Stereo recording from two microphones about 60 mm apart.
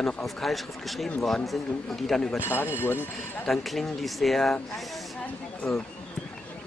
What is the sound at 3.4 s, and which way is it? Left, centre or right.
Speech, centre.